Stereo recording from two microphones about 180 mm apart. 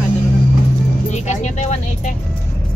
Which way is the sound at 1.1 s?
40° left (ahead or behind).